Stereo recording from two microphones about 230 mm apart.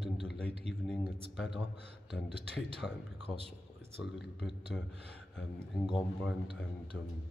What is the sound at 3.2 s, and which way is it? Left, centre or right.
Speech, right.